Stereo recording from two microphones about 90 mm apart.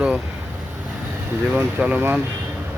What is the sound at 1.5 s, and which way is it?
Speech, 20° right (ahead or behind).